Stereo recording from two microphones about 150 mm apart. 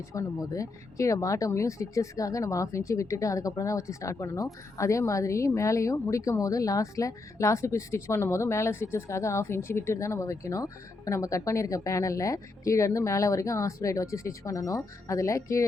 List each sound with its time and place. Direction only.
0.1 s a woman's voice: 20° left (ahead or behind)